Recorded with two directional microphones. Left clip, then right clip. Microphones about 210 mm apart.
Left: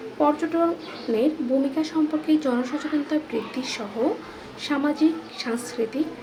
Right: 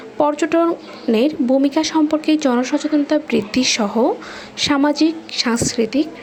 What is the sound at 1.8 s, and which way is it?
Speech, 40° right (ahead or behind).